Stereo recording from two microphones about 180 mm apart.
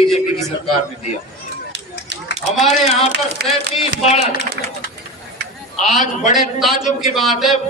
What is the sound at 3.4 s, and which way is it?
Speech, 65° right (ahead or behind).